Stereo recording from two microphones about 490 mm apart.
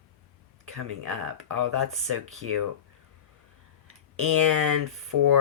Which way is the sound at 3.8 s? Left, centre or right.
Right.